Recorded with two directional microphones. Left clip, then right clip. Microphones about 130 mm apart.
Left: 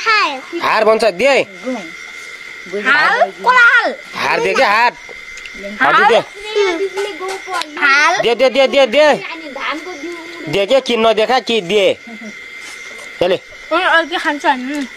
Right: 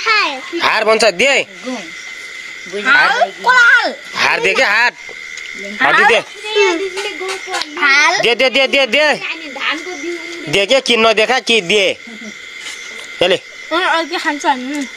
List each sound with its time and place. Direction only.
0.0 s speech: centre (ahead or behind)
2.8 s a woman's voice: 5° left (ahead or behind)
6.5 s a child's voice: 40° right (ahead or behind)
7.7 s a woman's voice: 10° left (ahead or behind)
8.3 s speech: 5° right (ahead or behind)
10.5 s speech: 5° left (ahead or behind)
13.2 s speech: centre (ahead or behind)
13.7 s a woman's voice: 15° left (ahead or behind)
14.5 s speech: centre (ahead or behind)